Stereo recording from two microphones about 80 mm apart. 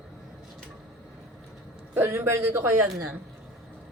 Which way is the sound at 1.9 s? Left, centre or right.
Right.